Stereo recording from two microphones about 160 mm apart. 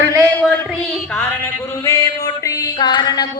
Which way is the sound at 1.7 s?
20° left (ahead or behind).